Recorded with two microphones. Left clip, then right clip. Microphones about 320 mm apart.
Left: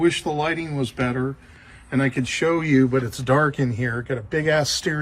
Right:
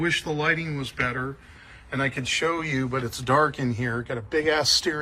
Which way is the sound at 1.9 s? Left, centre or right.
Centre.